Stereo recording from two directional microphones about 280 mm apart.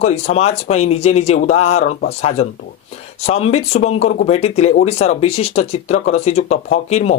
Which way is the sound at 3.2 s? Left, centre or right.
Left.